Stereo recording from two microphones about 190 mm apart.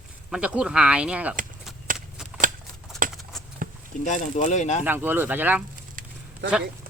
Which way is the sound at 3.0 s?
45° right (ahead or behind).